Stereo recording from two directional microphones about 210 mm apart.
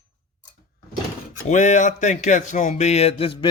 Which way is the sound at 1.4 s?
35° left (ahead or behind).